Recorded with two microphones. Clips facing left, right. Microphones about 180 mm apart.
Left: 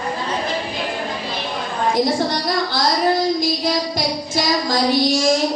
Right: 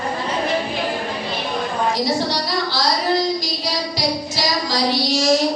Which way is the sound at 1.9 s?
50° left (ahead or behind).